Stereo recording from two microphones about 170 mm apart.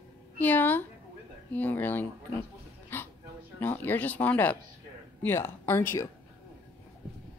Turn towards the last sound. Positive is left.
turn(degrees=15)  # may be behind; listen again after turning